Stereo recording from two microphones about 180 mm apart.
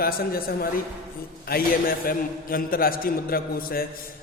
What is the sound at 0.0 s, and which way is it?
A woman's voice, 55° left (ahead or behind).